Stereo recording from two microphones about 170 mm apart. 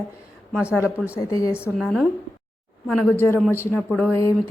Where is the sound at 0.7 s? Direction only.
5° right (ahead or behind).